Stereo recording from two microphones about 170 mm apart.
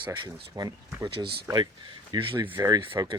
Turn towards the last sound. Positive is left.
turn(degrees=-20)  # may be behind; listen again after turning